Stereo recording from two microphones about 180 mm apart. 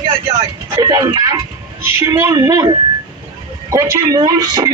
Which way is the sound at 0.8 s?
20° right (ahead or behind).